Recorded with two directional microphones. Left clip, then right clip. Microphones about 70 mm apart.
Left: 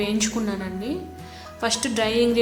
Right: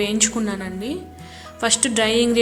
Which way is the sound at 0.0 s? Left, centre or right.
Right.